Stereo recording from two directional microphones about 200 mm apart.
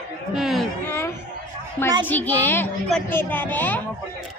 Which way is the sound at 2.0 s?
10° left (ahead or behind).